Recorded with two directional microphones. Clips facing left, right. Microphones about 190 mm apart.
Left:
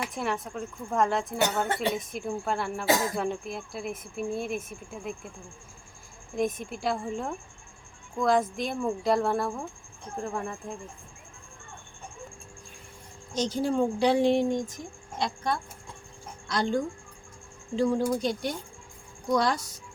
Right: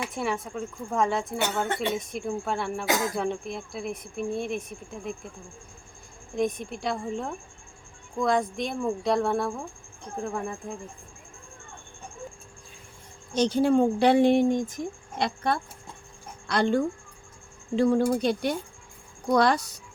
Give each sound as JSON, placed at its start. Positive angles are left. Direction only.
{"t": 0.1, "sound": "speech", "side_deg": 0}
{"t": 2.8, "sound": "speech", "side_deg": 30}
{"t": 3.2, "sound": "speech", "side_deg": 0}
{"t": 6.3, "sound": "speech", "side_deg": 0}
{"t": 13.3, "sound": "speech", "side_deg": -65}
{"t": 16.5, "sound": "speech", "side_deg": -65}